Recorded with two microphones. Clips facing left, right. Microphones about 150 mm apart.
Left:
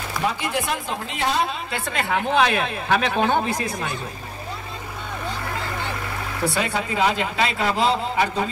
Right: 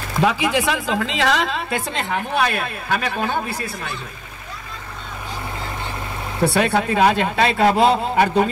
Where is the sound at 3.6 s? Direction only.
15° left (ahead or behind).